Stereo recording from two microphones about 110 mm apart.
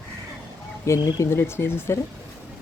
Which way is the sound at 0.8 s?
30° left (ahead or behind).